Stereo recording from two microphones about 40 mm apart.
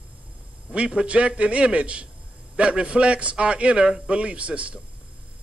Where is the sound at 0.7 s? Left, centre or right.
Right.